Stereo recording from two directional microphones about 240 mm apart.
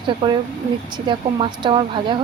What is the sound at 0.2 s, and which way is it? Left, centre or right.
A woman's voice, centre.